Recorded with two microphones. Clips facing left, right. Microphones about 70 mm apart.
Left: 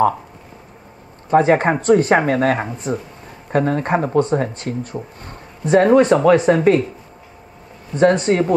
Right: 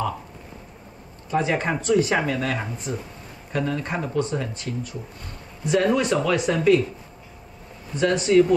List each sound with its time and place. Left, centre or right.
1.3 s speech: left
7.9 s speech: left